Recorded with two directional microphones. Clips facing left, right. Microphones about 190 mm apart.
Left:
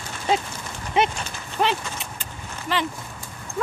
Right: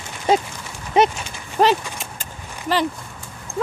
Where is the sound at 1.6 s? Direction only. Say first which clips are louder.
Right 6 dB; 45° right (ahead or behind).